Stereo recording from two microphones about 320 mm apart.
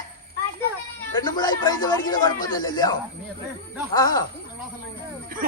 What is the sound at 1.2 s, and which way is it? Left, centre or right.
Speech, centre.